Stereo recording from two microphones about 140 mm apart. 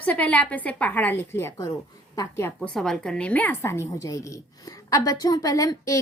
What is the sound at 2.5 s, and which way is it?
A woman's voice, 5° left (ahead or behind).